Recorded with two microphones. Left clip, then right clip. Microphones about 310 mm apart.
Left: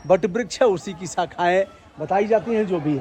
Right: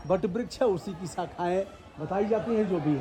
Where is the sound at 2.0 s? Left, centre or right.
Left.